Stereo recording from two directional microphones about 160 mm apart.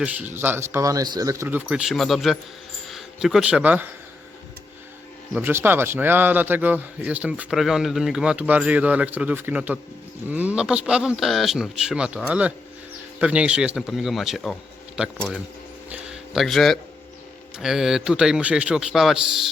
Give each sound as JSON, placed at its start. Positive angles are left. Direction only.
{"t": 0.0, "sound": "speech", "side_deg": -10}
{"t": 1.6, "sound": "a man's voice", "side_deg": -5}
{"t": 5.3, "sound": "a man's voice", "side_deg": -15}
{"t": 15.9, "sound": "a sound", "side_deg": -5}
{"t": 17.6, "sound": "a man's voice", "side_deg": -5}